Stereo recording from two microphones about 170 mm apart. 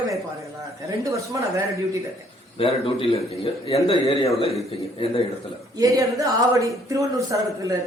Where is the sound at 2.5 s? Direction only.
35° left (ahead or behind).